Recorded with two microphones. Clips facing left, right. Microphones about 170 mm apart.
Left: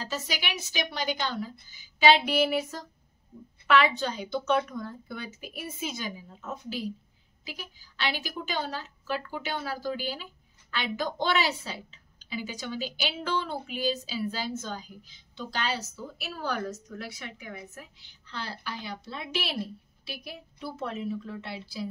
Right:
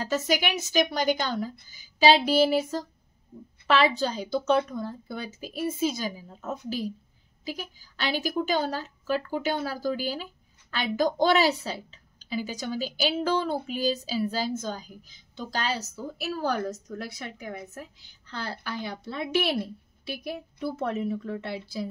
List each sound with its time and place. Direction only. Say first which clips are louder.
0.0 s a woman's voice: right 8 dB; 50° right (ahead or behind)